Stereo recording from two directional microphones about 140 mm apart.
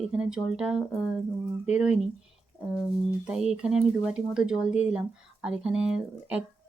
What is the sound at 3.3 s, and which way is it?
Speech, 5° right (ahead or behind).